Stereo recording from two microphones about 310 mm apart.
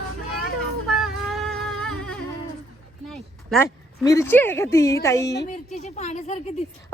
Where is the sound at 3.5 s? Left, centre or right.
Centre.